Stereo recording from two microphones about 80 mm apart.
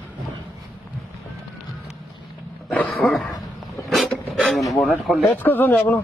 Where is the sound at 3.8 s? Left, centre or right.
Centre.